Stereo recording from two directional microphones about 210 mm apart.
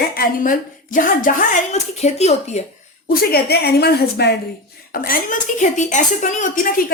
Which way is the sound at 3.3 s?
50° left (ahead or behind).